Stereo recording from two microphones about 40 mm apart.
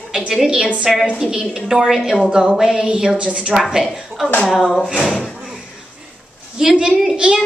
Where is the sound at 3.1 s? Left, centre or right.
Right.